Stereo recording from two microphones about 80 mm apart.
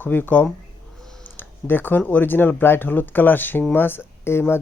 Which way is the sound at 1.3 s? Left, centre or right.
Left.